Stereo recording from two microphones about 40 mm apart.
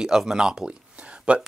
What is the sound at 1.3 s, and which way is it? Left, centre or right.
Speech, right.